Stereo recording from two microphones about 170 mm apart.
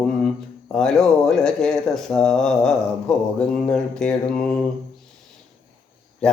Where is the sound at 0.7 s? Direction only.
5° left (ahead or behind).